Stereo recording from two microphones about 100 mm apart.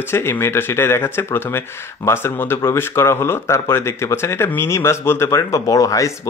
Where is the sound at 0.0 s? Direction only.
25° left (ahead or behind).